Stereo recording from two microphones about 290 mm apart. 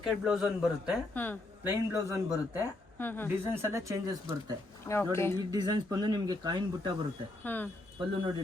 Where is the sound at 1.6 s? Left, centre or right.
Centre.